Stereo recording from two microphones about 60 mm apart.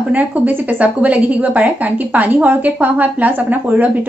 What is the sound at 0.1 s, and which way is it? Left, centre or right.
A woman's voice, right.